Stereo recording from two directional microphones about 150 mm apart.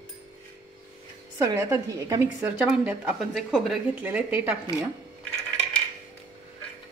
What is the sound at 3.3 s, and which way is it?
Speech, centre (ahead or behind).